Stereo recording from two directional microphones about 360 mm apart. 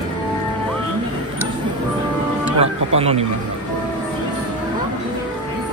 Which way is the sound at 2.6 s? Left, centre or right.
Centre.